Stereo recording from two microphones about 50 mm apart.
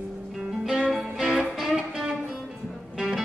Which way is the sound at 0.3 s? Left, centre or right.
Centre.